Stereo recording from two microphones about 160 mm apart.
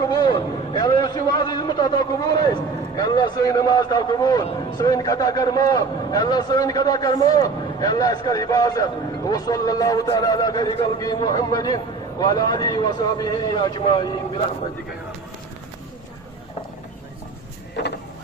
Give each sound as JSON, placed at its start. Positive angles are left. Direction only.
{"t": 0.0, "sound": "a man's voice", "side_deg": 25}